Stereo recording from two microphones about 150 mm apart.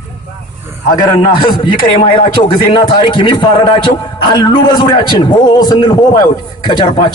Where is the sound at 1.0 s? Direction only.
30° left (ahead or behind).